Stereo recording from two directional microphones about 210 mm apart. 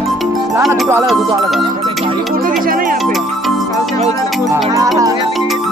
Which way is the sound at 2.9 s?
Centre (ahead or behind).